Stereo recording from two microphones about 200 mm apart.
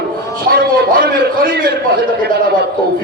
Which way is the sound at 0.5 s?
45° right (ahead or behind).